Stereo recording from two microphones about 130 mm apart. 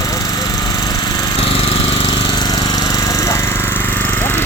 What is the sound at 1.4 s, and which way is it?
Jackhammer, 45° left (ahead or behind).